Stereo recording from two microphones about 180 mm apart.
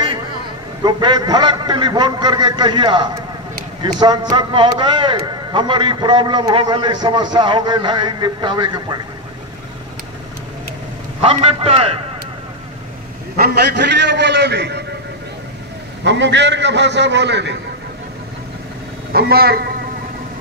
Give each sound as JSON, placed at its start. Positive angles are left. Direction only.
{"t": 0.8, "sound": "a man's voice", "side_deg": -25}
{"t": 11.1, "sound": "a man's voice", "side_deg": -30}
{"t": 13.4, "sound": "a man's voice", "side_deg": -70}
{"t": 16.0, "sound": "a man's voice", "side_deg": -80}
{"t": 19.1, "sound": "a man's voice", "side_deg": -60}